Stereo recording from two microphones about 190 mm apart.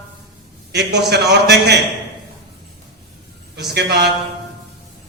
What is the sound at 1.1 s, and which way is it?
Speech, 60° right (ahead or behind).